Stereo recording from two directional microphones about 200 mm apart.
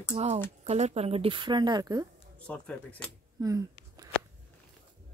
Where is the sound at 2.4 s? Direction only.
5° left (ahead or behind).